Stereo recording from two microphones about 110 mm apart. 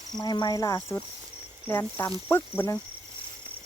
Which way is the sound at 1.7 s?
15° left (ahead or behind).